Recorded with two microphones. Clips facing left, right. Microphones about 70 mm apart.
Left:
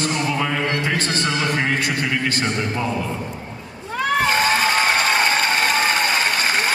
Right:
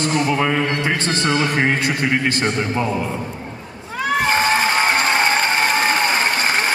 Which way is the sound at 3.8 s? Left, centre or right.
Centre.